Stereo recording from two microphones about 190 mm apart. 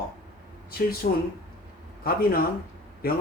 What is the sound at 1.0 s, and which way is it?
Speech, 50° left (ahead or behind).